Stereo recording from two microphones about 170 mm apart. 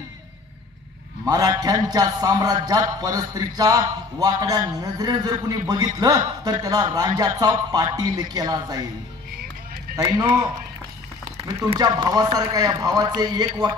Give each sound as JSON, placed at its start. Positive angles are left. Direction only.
{"t": 1.2, "sound": "a man's voice", "side_deg": -20}
{"t": 9.9, "sound": "speech", "side_deg": -20}
{"t": 11.7, "sound": "a man's voice", "side_deg": -25}